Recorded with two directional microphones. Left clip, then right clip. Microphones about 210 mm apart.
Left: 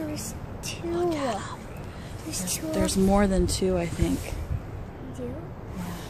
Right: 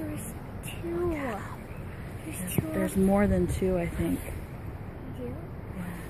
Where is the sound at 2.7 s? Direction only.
5° left (ahead or behind).